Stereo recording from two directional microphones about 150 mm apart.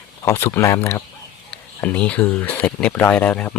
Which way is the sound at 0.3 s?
15° left (ahead or behind).